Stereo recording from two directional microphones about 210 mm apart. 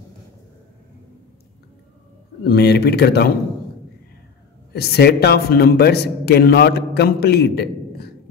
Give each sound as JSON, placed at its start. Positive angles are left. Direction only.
{"t": 2.4, "sound": "a man's voice", "side_deg": 50}
{"t": 4.7, "sound": "a man's voice", "side_deg": 50}